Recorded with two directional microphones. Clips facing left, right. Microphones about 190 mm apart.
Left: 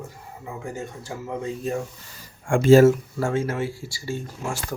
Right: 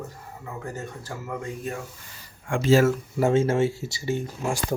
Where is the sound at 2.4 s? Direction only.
50° left (ahead or behind).